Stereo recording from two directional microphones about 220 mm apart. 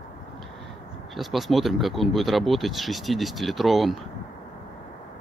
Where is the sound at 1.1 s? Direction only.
Centre (ahead or behind).